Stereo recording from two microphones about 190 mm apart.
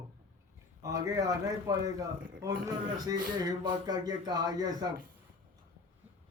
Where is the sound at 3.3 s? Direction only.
20° right (ahead or behind).